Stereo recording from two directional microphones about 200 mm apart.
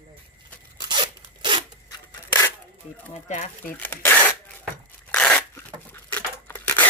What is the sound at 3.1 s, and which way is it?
Speech, 35° left (ahead or behind).